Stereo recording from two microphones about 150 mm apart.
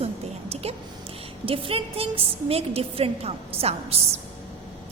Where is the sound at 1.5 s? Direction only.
40° right (ahead or behind).